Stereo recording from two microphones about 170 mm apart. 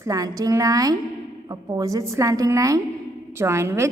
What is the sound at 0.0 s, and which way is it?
A woman's voice, 20° right (ahead or behind).